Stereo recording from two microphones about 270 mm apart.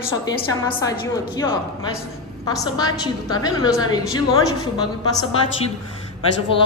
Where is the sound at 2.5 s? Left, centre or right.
Centre.